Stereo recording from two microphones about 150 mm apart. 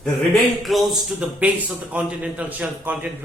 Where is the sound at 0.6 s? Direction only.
Centre (ahead or behind).